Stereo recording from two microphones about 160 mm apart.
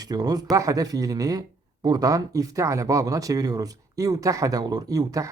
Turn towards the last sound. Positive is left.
turn(degrees=-20)  # may be behind; listen again after turning